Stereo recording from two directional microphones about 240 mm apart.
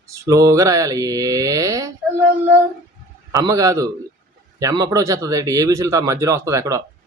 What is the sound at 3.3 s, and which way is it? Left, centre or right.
Speech, centre.